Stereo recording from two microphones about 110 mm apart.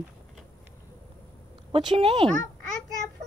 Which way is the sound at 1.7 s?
50° right (ahead or behind).